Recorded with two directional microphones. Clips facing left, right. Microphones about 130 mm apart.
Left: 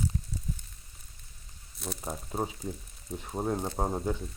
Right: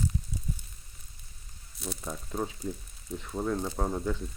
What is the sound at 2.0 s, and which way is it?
Speech, 30° left (ahead or behind).